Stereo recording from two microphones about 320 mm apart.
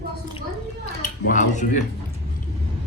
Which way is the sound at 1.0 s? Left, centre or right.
Left.